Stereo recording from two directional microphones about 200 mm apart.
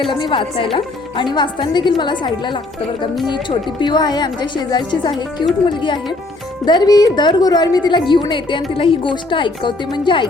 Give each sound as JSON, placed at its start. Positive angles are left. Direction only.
{"t": 0.1, "sound": "a woman's voice", "side_deg": 25}